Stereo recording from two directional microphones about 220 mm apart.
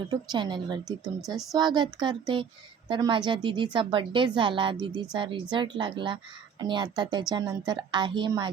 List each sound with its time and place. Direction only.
0.1 s speech: 20° right (ahead or behind)